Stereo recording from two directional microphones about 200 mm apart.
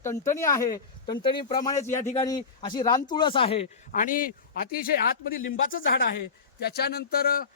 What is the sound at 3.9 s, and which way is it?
Speech, 40° left (ahead or behind).